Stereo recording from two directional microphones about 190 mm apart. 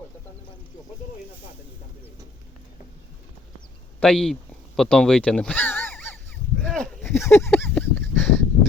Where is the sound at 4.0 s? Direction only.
5° left (ahead or behind).